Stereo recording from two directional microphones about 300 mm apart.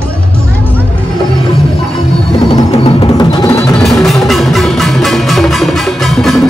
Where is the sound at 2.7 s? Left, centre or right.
Centre.